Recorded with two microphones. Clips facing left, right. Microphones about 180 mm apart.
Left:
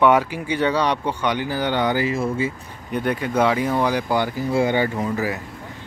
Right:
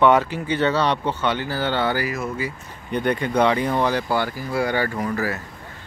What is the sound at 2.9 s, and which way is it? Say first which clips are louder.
Speech: right 1 dB; 5° left (ahead or behind).